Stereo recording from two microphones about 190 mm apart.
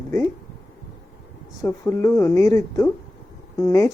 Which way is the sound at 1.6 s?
15° left (ahead or behind).